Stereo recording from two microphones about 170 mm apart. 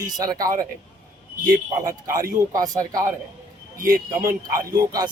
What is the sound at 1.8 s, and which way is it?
A man's voice, 20° right (ahead or behind).